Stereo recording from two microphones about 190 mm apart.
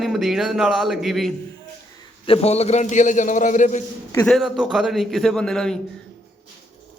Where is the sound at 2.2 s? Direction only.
30° left (ahead or behind).